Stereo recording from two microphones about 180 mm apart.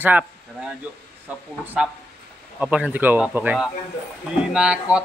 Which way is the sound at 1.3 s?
5° right (ahead or behind).